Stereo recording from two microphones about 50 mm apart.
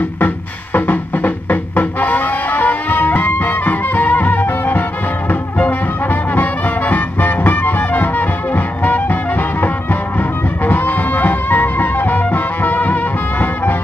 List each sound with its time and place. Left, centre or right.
0.7 s music: left